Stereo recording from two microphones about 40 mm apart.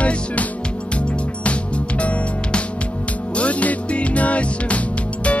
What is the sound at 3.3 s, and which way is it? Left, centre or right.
Music, left.